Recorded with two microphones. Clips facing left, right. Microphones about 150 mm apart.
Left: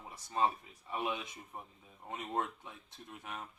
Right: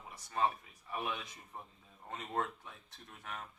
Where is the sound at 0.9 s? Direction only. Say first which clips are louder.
Left 2 dB; 20° left (ahead or behind).